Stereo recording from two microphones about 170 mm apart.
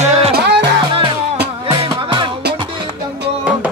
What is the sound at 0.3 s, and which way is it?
Music, 85° right.